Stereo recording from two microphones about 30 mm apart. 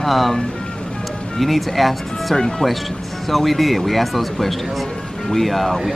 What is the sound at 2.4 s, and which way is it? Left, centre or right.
Speech, centre.